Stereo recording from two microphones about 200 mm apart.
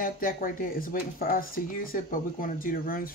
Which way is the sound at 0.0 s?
45° left (ahead or behind).